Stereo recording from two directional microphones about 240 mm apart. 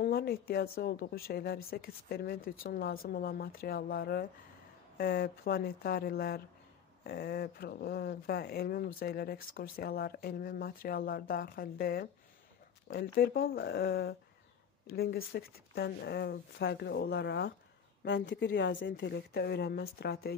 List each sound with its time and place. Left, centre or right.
0.0 s a woman's voice: left